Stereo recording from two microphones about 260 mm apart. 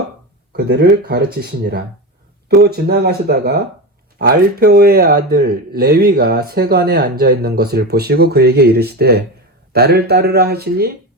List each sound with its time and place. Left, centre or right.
0.5 s speech: right